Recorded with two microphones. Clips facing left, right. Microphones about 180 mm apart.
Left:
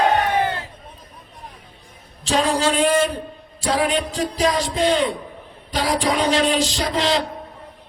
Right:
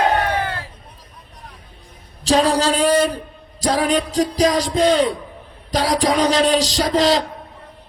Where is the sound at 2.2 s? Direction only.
35° right (ahead or behind).